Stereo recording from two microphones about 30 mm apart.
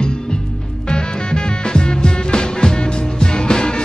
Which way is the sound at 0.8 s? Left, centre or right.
Left.